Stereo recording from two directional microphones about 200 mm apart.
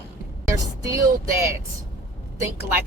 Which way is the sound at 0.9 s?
15° right (ahead or behind).